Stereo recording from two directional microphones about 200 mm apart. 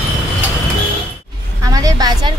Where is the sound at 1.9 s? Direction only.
20° right (ahead or behind).